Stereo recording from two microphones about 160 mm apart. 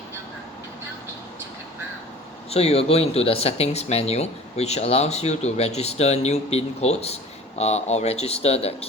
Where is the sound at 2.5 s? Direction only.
40° left (ahead or behind).